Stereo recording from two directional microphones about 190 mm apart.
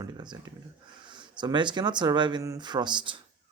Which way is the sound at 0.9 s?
25° right (ahead or behind).